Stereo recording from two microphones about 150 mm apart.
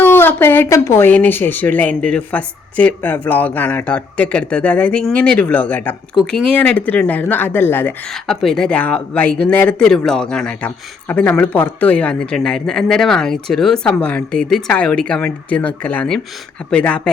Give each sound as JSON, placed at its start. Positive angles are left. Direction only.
{"t": 0.0, "sound": "speech", "side_deg": 15}
{"t": 8.1, "sound": "speech", "side_deg": 0}